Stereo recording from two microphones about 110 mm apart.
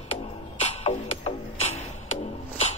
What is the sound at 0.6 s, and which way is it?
Music, 90° left.